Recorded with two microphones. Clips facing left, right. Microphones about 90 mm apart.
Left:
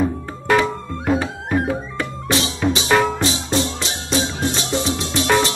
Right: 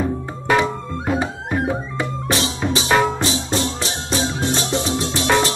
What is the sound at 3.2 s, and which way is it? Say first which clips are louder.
Music: left 1 dB; 30° right (ahead or behind).